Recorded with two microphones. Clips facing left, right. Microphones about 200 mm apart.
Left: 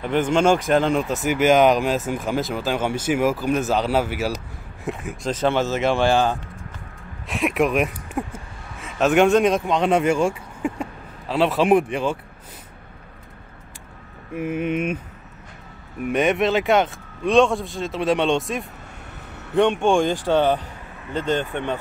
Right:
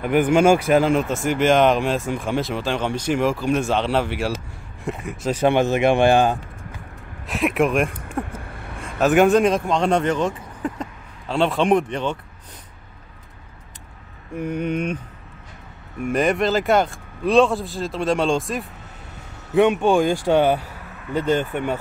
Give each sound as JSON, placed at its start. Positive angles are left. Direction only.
{"t": 0.0, "sound": "speech", "side_deg": -10}
{"t": 5.3, "sound": "a man's voice", "side_deg": -15}
{"t": 7.2, "sound": "speech", "side_deg": 0}
{"t": 14.3, "sound": "speech", "side_deg": 5}
{"t": 16.0, "sound": "a man's voice", "side_deg": 0}